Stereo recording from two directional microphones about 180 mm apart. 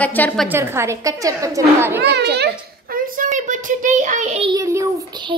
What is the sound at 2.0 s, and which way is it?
Speech, 65° right (ahead or behind).